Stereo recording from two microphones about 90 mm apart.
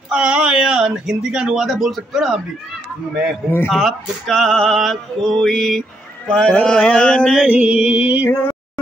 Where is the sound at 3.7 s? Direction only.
Centre (ahead or behind).